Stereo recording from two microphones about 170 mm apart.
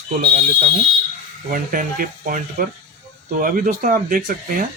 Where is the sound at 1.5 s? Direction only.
55° right (ahead or behind).